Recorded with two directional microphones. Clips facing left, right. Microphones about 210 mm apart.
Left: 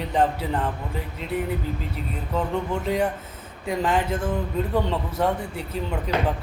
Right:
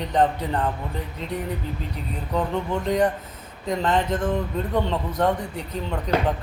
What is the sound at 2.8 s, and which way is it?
A man's voice, 5° left (ahead or behind).